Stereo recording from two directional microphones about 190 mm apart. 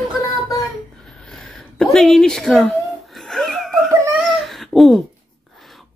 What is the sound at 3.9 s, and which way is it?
Baby cry, 10° right (ahead or behind).